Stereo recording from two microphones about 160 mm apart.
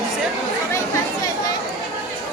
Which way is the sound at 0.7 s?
20° left (ahead or behind).